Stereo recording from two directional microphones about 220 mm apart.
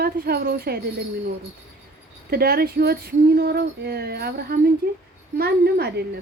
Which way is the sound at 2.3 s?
45° right (ahead or behind).